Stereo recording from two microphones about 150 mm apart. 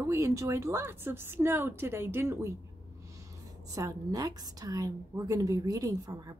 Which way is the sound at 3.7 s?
25° right (ahead or behind).